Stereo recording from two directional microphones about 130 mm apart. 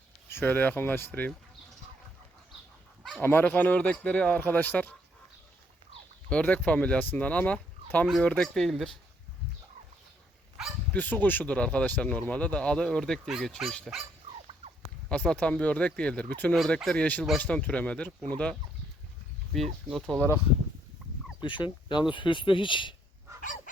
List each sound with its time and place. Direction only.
0.3 s speech: 15° left (ahead or behind)
3.2 s speech: 15° left (ahead or behind)
6.3 s speech: 10° left (ahead or behind)
10.9 s speech: 15° left (ahead or behind)
15.1 s speech: 10° left (ahead or behind)
19.9 s speech: 5° left (ahead or behind)
21.4 s speech: 35° left (ahead or behind)